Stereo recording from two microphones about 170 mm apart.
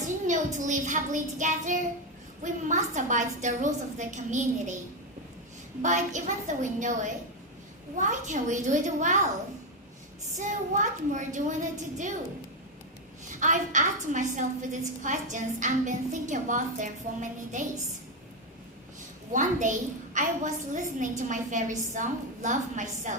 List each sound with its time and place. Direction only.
0.3 s a woman's voice: 45° right (ahead or behind)
5.8 s a woman's voice: 45° right (ahead or behind)
10.3 s a woman's voice: 45° right (ahead or behind)
13.4 s a woman's voice: 45° right (ahead or behind)
19.3 s a woman's voice: 50° right (ahead or behind)